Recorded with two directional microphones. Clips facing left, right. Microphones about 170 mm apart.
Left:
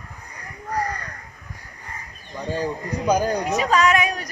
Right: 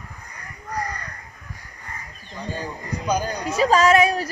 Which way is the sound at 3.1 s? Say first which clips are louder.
Left 4 dB; 15° left (ahead or behind).